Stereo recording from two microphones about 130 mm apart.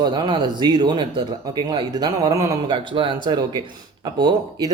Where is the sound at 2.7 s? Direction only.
40° right (ahead or behind).